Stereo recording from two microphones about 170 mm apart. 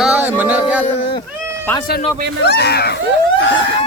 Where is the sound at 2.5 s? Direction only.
70° left (ahead or behind).